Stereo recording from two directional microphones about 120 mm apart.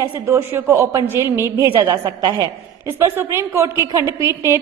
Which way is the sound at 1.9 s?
35° right (ahead or behind).